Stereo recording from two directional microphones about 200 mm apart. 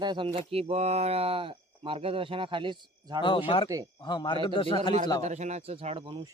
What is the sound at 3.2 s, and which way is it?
A man's voice, 25° left (ahead or behind).